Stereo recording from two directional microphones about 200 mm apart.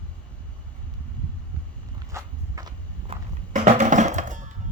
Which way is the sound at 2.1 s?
20° right (ahead or behind).